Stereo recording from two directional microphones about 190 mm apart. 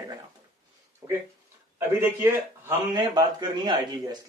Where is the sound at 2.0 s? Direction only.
10° right (ahead or behind).